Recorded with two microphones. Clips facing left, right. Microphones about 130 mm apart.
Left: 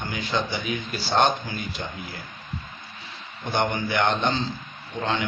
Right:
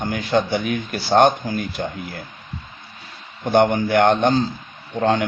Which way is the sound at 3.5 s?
50° right (ahead or behind).